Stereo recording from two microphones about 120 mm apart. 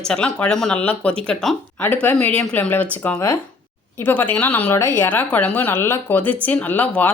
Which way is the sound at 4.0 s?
15° left (ahead or behind).